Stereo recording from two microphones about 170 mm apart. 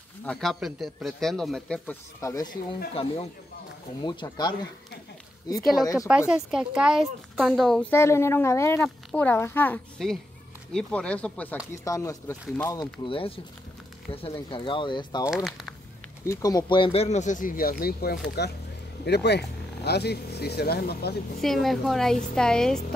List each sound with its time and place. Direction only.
0.2 s a man's voice: 5° left (ahead or behind)
2.9 s speech: 35° left (ahead or behind)
5.9 s a man's voice: 5° right (ahead or behind)
7.9 s speech: 15° left (ahead or behind)
11.8 s speech: 20° left (ahead or behind)
12.7 s speech: 30° left (ahead or behind)
15.2 s speech: centre (ahead or behind)
16.3 s speech: 20° left (ahead or behind); by 21.2 s 70° left (ahead or behind)
21.4 s a man's voice: centre (ahead or behind)